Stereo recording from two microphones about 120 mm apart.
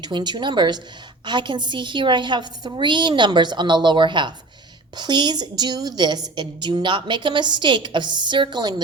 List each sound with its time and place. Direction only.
0.0 s a woman's voice: 35° right (ahead or behind)